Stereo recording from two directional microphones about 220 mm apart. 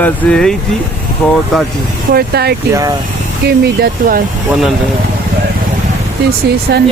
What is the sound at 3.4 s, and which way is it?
Speech, 45° right (ahead or behind).